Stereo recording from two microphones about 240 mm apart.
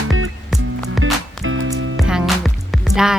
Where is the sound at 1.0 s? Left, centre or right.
Right.